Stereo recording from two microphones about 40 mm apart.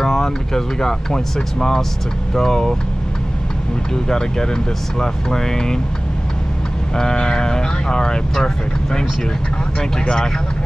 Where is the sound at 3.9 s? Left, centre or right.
Centre.